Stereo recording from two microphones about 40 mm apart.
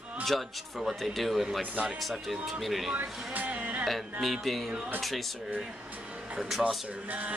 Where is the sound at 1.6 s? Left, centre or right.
Right.